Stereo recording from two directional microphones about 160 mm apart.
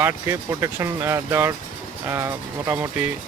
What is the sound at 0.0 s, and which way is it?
Speech, 15° right (ahead or behind).